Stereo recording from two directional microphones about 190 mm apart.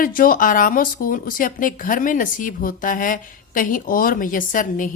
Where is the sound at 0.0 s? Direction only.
45° left (ahead or behind).